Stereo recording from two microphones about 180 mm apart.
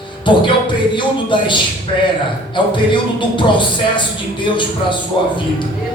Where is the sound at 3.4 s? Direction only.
25° left (ahead or behind).